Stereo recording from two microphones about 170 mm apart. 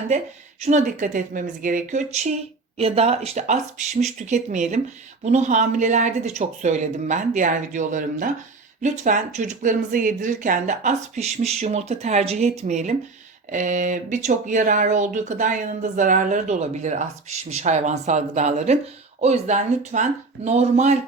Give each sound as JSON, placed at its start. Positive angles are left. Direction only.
{"t": 0.6, "sound": "speech", "side_deg": -45}